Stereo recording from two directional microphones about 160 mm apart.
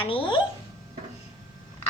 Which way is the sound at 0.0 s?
35° left (ahead or behind).